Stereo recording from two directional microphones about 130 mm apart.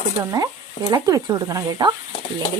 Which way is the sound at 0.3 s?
25° right (ahead or behind).